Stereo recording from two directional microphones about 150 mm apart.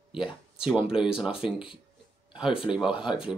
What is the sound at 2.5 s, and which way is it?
Speech, 5° right (ahead or behind).